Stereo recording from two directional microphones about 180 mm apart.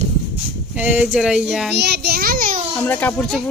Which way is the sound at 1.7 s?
70° right (ahead or behind).